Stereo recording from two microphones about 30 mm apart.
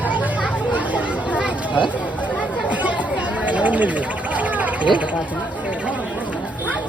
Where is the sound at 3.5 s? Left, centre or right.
Right.